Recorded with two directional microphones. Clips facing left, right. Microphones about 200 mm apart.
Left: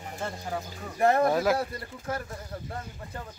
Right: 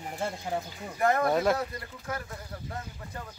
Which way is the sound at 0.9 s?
30° left (ahead or behind).